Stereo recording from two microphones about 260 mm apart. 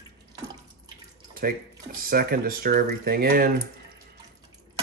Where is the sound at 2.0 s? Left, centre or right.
Right.